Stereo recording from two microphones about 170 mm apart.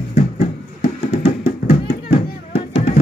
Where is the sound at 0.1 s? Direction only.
40° left (ahead or behind).